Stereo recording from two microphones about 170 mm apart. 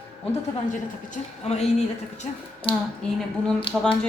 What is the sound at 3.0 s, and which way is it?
Speech, 5° left (ahead or behind).